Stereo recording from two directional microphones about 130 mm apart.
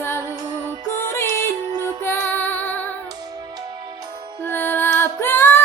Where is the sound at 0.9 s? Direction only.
20° left (ahead or behind).